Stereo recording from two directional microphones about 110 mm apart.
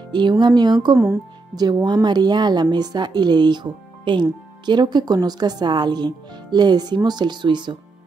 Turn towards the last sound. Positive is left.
turn(degrees=-45)  # may be behind; listen again after turning